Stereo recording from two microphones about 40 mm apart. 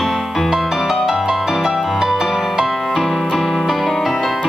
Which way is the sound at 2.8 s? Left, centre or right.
Centre.